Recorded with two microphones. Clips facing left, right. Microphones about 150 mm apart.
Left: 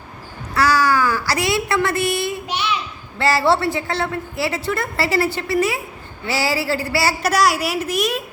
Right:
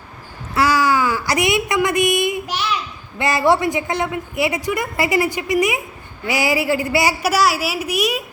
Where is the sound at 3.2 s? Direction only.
20° right (ahead or behind).